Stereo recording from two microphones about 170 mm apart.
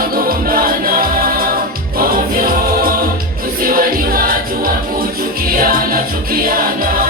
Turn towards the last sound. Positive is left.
turn(degrees=-60)  # may be behind; listen again after turning